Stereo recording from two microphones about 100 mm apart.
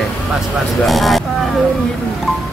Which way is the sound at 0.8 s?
Centre (ahead or behind).